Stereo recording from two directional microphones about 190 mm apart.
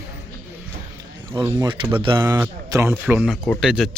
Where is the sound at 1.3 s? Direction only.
15° right (ahead or behind).